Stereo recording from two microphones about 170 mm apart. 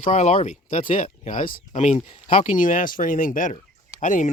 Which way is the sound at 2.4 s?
50° left (ahead or behind).